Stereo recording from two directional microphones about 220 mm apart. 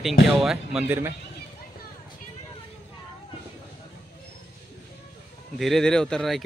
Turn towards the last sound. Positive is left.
turn(degrees=0)  # may be behind; listen again after turning